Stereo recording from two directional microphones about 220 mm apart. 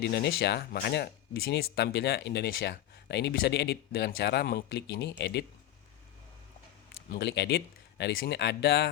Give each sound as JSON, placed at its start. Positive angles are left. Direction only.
{"t": 0.0, "sound": "speech", "side_deg": 50}
{"t": 7.1, "sound": "speech", "side_deg": 50}